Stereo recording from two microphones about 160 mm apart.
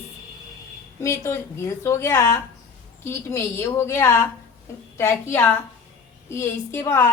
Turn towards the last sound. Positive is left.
turn(degrees=15)  # may be behind; listen again after turning